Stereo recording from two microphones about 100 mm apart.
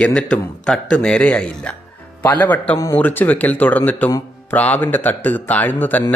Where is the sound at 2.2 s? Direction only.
20° left (ahead or behind).